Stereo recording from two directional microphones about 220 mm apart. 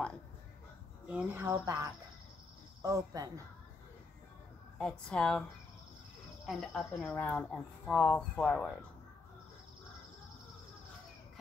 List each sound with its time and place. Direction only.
1.0 s speech: 5° right (ahead or behind)
4.7 s speech: 5° left (ahead or behind)
6.4 s speech: centre (ahead or behind)